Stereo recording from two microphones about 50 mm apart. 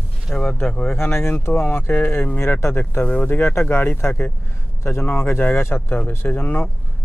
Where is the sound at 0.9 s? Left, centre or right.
Left.